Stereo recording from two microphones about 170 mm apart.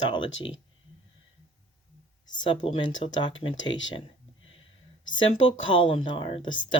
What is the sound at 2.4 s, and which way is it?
Speech, 30° left (ahead or behind).